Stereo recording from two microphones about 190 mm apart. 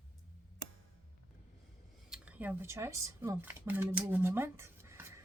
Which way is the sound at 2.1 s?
10° right (ahead or behind).